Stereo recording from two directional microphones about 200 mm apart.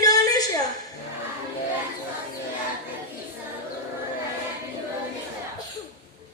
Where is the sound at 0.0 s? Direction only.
20° left (ahead or behind).